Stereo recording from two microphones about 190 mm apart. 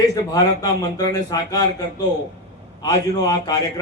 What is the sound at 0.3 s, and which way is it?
A man's voice, 20° left (ahead or behind).